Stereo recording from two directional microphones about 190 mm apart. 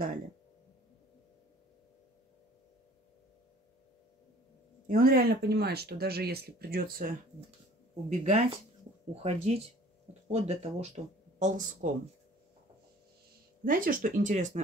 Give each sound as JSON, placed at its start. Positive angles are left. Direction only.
{"t": 4.8, "sound": "speech", "side_deg": -50}
{"t": 8.1, "sound": "speech", "side_deg": -35}
{"t": 13.7, "sound": "speech", "side_deg": -45}